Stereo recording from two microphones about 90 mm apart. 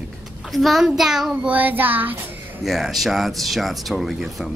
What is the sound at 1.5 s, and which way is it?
Child singing, 20° right (ahead or behind).